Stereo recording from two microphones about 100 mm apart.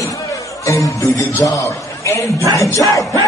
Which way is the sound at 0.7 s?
30° left (ahead or behind).